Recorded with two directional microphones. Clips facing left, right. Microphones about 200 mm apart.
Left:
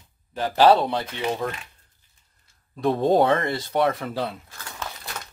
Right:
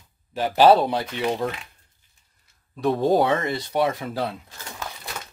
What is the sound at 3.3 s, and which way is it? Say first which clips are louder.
Speech: left 1 dB; 15° right (ahead or behind).